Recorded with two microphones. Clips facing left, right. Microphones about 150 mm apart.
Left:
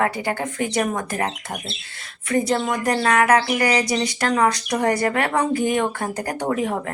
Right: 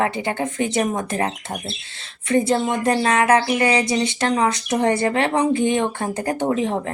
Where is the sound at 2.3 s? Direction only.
25° right (ahead or behind).